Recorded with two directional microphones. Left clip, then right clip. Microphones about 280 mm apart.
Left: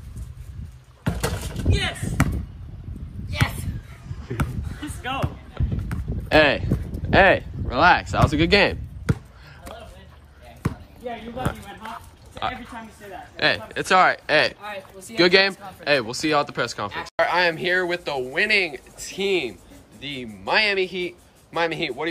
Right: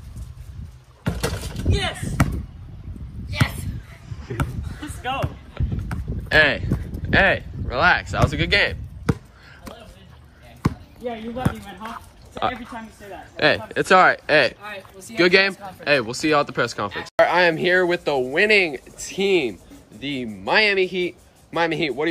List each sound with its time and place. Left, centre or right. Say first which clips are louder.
1.0 s a sound: right 1 dB; centre
1.7 s speech: right 1 dB; centre
4.4 s a sound: right 1 dB; centre
10.6 s basketball bounce: right 5 dB; right
11.4 s speech: right 2 dB; centre
14.6 s a man's voice: left 1 dB; centre
15.1 s speech: right 1 dB; centre